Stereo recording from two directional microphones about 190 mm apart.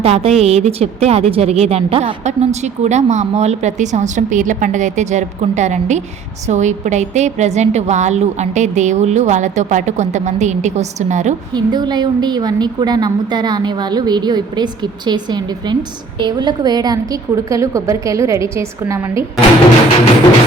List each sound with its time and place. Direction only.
0.0 s a woman's voice: 30° right (ahead or behind)
11.5 s a woman's voice: 20° right (ahead or behind)